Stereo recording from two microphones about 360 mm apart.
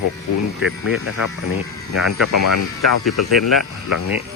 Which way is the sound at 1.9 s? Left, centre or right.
Left.